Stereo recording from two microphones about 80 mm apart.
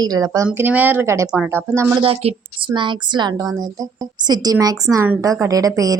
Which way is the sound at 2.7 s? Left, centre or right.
Right.